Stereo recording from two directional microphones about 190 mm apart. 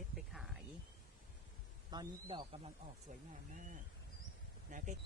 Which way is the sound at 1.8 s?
25° right (ahead or behind).